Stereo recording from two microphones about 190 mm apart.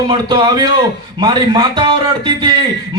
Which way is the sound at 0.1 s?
25° right (ahead or behind).